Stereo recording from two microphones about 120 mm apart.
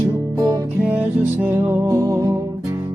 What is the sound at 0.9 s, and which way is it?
Music, 10° right (ahead or behind).